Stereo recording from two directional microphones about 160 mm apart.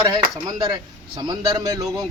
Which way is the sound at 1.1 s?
25° right (ahead or behind).